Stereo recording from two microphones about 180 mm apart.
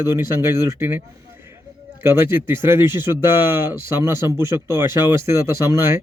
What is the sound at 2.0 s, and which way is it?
Speech, 15° right (ahead or behind).